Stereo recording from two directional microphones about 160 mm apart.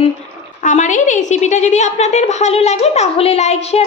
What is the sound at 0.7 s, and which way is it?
A woman's voice, 50° left (ahead or behind).